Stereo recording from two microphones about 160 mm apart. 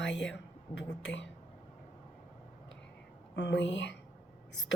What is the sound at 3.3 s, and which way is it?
Speech, 90° left.